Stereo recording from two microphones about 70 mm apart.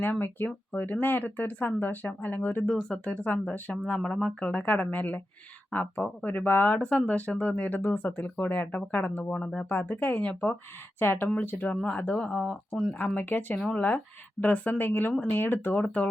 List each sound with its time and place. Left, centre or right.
0.0 s speech: left
9.3 s speech: centre
9.6 s speech: left
12.5 s speech: centre
13.0 s speech: left